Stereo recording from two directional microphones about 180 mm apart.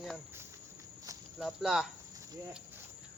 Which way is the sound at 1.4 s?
Centre (ahead or behind).